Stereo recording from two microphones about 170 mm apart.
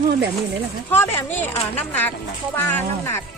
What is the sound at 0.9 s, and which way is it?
Speech, 15° left (ahead or behind).